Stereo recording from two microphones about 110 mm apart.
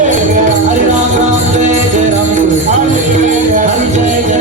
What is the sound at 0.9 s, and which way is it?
Music, 90° right.